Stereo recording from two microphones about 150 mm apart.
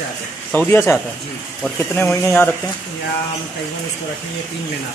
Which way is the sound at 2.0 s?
10° left (ahead or behind).